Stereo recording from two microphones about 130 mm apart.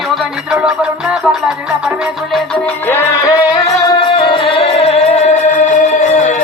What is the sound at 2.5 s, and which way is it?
Music, 15° left (ahead or behind).